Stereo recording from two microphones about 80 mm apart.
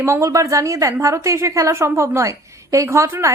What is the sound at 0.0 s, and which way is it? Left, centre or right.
A woman's voice, right.